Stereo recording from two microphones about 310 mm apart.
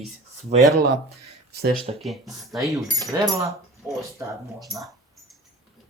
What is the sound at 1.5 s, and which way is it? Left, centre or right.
Speech, right.